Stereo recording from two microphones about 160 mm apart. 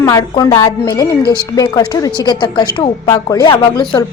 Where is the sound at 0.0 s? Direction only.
20° left (ahead or behind).